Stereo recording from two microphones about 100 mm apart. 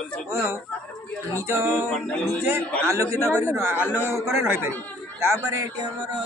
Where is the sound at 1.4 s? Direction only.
30° right (ahead or behind).